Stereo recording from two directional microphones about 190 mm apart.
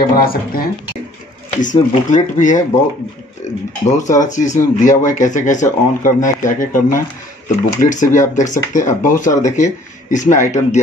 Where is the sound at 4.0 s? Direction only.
40° left (ahead or behind).